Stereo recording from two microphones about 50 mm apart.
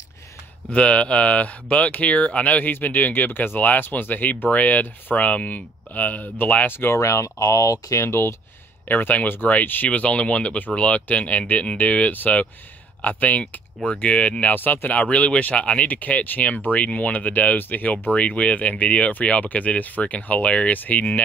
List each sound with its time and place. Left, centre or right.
0.7 s speech: left
6.9 s speech: left
8.8 s speech: left
9.8 s speech: left
14.5 s speech: left
14.9 s speech: left
20.7 s speech: left